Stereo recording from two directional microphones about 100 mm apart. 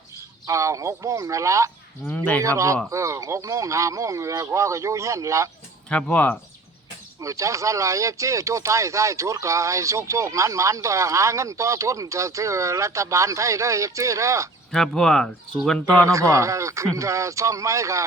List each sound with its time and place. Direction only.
0.4 s speech: 30° right (ahead or behind)
2.0 s speech: 15° left (ahead or behind)
2.4 s speech: 30° right (ahead or behind)
5.9 s speech: 15° left (ahead or behind)
7.2 s speech: 30° right (ahead or behind)
14.7 s speech: 5° left (ahead or behind)
16.0 s speech: 30° right (ahead or behind)